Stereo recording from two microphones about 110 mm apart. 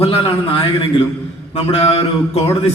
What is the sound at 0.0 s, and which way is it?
Speech, 60° left (ahead or behind).